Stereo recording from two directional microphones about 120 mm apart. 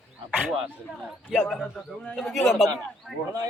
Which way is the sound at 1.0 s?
Centre (ahead or behind).